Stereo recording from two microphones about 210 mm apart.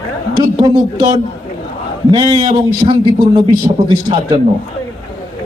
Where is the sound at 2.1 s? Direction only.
20° right (ahead or behind).